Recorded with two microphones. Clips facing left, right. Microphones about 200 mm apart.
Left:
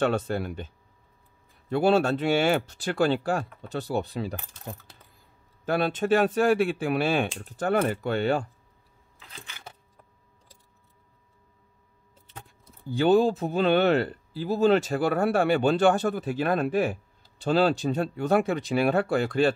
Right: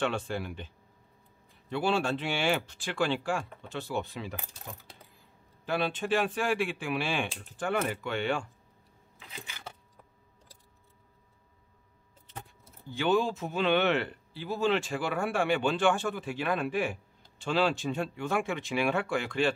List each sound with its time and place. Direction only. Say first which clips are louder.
0.0 s speech: left 6 dB; 40° left (ahead or behind)
1.7 s speech: left 7 dB; 40° left (ahead or behind)
5.7 s speech: left 6 dB; 45° left (ahead or behind)
12.9 s speech: left 7 dB; 35° left (ahead or behind)